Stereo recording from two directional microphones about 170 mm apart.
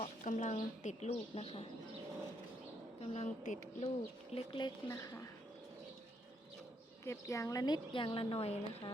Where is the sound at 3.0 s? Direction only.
40° left (ahead or behind).